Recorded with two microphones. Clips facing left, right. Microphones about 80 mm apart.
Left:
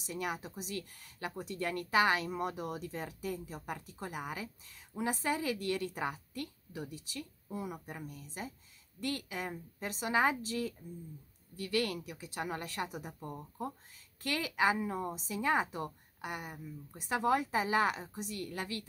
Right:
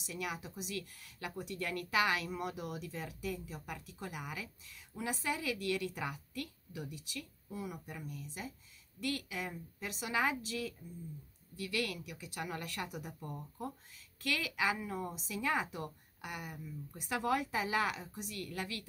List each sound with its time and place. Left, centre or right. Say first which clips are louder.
0.0 s speech: left 3 dB; left